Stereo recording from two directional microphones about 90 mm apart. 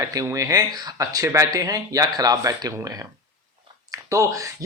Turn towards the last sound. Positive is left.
turn(degrees=-35)  # may be behind; listen again after turning